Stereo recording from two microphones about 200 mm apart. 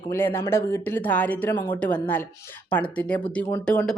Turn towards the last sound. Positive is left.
turn(degrees=5)  # may be behind; listen again after turning